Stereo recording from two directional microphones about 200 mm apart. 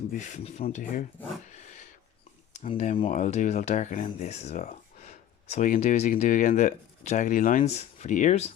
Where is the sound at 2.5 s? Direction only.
35° left (ahead or behind).